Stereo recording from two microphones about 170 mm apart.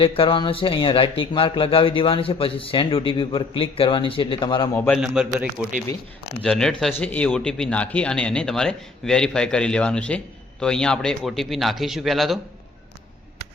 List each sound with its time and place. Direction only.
0.0 s a man's voice: 30° left (ahead or behind)
4.7 s a man's voice: 10° left (ahead or behind)
4.9 s speech: 5° right (ahead or behind)
6.4 s speech: 5° left (ahead or behind)